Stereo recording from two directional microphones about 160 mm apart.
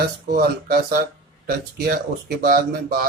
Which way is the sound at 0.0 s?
75° right (ahead or behind).